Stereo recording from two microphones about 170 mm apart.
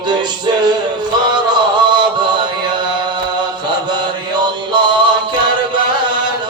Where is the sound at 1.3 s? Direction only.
25° right (ahead or behind).